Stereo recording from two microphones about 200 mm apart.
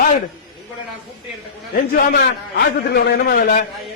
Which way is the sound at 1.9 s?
50° left (ahead or behind).